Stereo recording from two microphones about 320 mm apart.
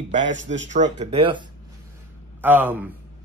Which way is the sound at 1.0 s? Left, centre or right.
Centre.